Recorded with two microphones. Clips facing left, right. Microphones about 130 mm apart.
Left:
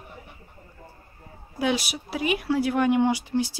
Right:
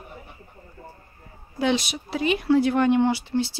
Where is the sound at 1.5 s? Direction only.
10° left (ahead or behind).